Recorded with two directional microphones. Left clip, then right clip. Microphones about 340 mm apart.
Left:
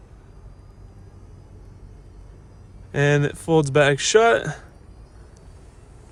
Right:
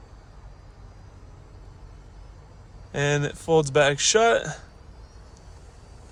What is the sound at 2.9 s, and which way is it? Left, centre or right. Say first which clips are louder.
A man's voice: left 5 dB; left.